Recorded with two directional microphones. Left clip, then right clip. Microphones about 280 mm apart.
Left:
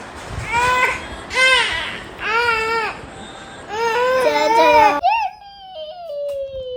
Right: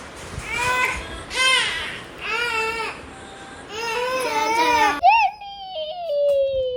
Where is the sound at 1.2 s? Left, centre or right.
Left.